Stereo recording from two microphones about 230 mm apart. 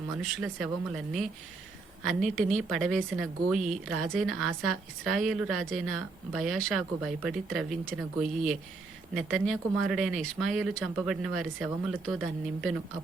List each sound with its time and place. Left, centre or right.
0.2 s speech: centre
9.1 s speech: centre